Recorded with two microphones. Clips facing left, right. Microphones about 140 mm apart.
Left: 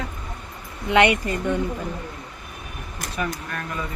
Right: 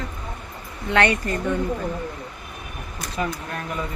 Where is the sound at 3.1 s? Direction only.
25° right (ahead or behind).